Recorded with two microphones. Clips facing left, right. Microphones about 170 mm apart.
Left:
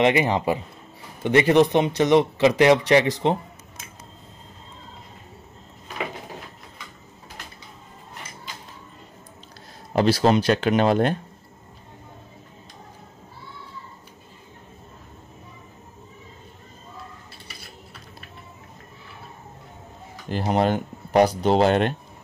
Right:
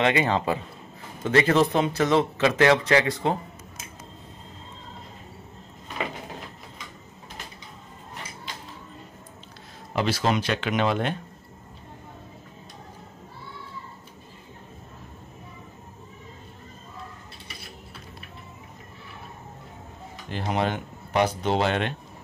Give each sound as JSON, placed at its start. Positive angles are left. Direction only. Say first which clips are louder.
{"t": 0.0, "sound": "speech", "louder": "left 3 dB", "side_deg": 20}
{"t": 9.9, "sound": "speech", "louder": "left 6 dB", "side_deg": 35}
{"t": 20.2, "sound": "speech", "louder": "left 5 dB", "side_deg": 40}